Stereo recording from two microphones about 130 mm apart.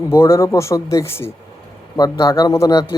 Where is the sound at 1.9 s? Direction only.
30° left (ahead or behind).